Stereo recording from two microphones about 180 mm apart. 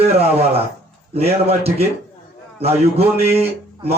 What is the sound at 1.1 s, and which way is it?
Speech, 35° right (ahead or behind).